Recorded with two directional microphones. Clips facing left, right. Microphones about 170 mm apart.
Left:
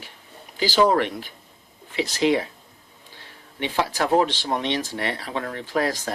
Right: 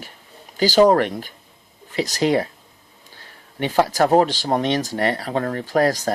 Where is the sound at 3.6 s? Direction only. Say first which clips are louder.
Right 6 dB; 45° right (ahead or behind).